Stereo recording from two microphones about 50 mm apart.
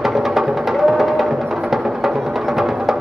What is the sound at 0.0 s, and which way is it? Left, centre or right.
Music, centre.